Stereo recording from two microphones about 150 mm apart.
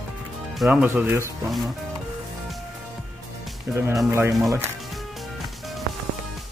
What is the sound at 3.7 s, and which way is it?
Speech, 20° right (ahead or behind).